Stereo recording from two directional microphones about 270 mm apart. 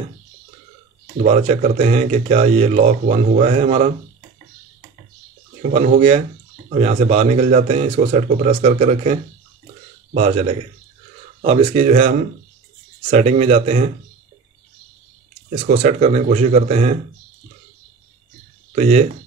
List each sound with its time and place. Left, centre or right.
1.2 s speech: right
5.6 s speech: right
10.1 s speech: right
15.5 s speech: right
18.8 s speech: right